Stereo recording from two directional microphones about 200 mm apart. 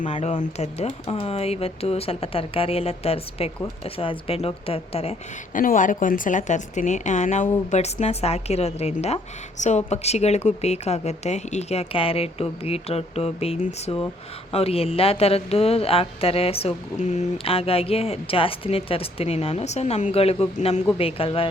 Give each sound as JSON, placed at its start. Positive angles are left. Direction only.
{"t": 0.0, "sound": "a woman's voice", "side_deg": 35}
{"t": 5.5, "sound": "a woman's voice", "side_deg": 40}